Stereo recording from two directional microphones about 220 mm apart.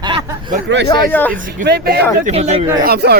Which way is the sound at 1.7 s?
45° right (ahead or behind).